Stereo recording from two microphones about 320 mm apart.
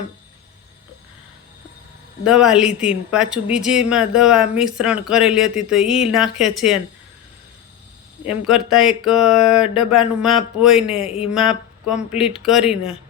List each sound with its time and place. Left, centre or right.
2.2 s speech: centre
8.3 s speech: centre
11.1 s speech: centre
11.3 s speech: centre